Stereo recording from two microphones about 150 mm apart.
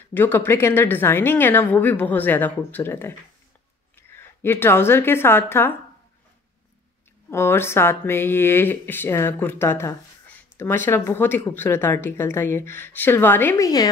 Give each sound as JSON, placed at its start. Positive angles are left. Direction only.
{"t": 0.1, "sound": "a woman's voice", "side_deg": 15}
{"t": 7.2, "sound": "speech", "side_deg": 15}